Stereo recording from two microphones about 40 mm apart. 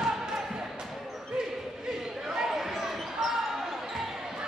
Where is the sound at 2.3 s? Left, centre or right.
Centre.